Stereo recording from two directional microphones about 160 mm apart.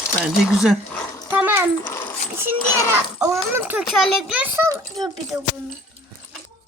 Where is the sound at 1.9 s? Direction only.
15° left (ahead or behind).